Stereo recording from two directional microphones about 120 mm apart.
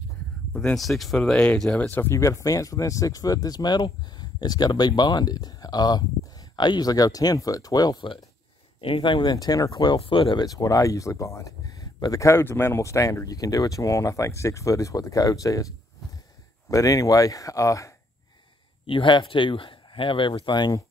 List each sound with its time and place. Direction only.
0.5 s speech: 5° left (ahead or behind); by 9.9 s 35° left (ahead or behind)
9.9 s speech: 50° left (ahead or behind)
10.4 s speech: 30° left (ahead or behind)
16.7 s speech: 25° left (ahead or behind)
18.9 s speech: 45° left (ahead or behind)